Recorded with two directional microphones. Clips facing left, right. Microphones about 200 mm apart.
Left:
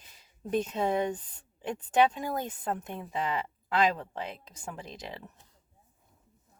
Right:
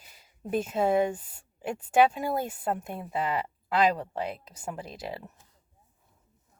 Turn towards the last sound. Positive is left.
turn(degrees=-5)  # may be behind; listen again after turning